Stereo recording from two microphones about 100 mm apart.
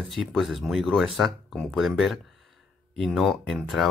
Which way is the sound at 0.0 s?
Centre (ahead or behind).